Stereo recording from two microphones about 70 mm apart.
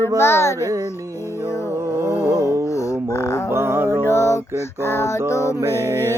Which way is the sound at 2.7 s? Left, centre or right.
Left.